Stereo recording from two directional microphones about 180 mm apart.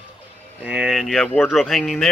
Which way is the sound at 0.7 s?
5° right (ahead or behind).